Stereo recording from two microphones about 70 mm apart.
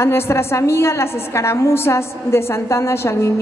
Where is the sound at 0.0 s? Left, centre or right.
Left.